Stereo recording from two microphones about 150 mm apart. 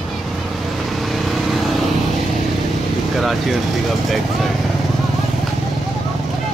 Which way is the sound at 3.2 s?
Centre (ahead or behind).